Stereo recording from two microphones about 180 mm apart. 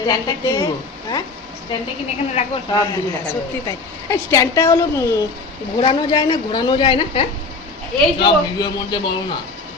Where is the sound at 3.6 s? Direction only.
20° left (ahead or behind).